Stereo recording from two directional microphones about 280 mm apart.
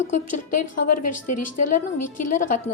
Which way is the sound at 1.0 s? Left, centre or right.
Left.